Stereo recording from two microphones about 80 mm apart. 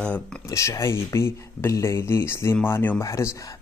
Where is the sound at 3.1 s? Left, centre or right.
Left.